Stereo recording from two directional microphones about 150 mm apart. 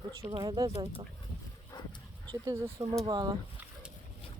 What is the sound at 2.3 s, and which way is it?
Speech, 20° right (ahead or behind).